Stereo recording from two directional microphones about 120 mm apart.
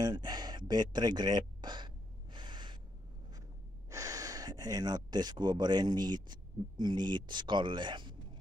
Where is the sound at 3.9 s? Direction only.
30° right (ahead or behind).